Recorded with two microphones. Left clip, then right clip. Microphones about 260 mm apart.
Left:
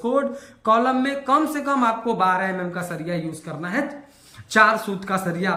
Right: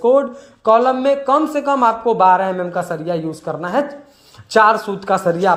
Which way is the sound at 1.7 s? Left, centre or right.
Centre.